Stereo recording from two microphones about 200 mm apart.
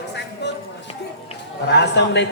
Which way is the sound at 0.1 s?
60° left (ahead or behind).